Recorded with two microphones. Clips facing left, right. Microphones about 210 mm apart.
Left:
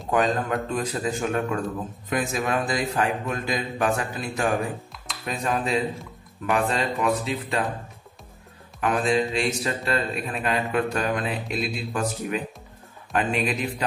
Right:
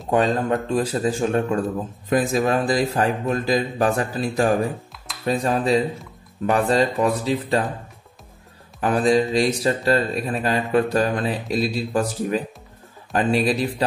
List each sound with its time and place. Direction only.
0.1 s speech: 30° right (ahead or behind)
8.8 s speech: 35° right (ahead or behind)